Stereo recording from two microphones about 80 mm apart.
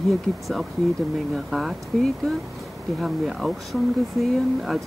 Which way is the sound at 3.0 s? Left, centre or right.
Centre.